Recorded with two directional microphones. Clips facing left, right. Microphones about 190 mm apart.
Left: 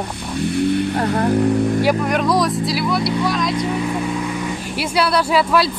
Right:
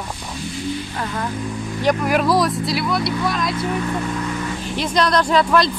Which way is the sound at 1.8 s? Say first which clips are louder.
Left 1 dB; centre (ahead or behind).